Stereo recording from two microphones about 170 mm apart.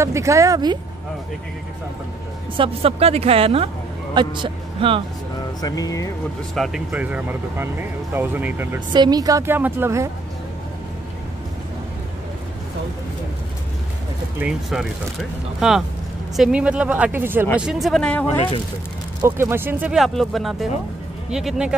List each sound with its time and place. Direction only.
0.0 s speech: 15° right (ahead or behind)
2.5 s speech: 35° right (ahead or behind)
5.6 s speech: 20° left (ahead or behind)
6.5 s speech: centre (ahead or behind)
8.9 s speech: 25° right (ahead or behind)
14.4 s speech: 5° right (ahead or behind)
16.3 s speech: 5° right (ahead or behind)
17.6 s speech: centre (ahead or behind)
19.2 s speech: 15° right (ahead or behind)